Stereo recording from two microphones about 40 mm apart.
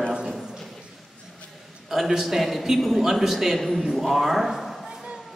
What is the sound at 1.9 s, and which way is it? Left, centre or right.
A man's voice, centre.